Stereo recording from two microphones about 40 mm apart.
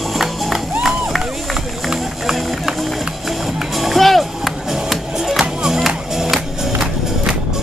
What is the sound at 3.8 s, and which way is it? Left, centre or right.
Music, centre.